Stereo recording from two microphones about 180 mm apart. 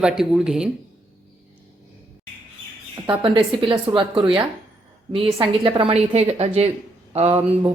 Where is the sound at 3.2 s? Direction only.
25° right (ahead or behind).